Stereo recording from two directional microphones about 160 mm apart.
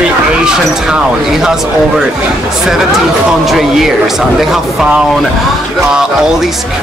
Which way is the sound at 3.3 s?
Centre (ahead or behind).